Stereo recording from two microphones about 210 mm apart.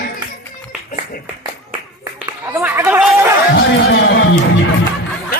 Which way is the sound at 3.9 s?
60° left (ahead or behind).